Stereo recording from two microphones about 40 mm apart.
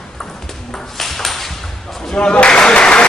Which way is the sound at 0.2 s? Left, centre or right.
Centre.